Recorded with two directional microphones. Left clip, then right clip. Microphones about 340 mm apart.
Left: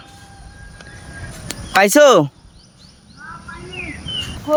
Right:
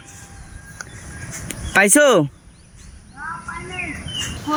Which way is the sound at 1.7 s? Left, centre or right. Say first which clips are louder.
Left 3 dB; centre.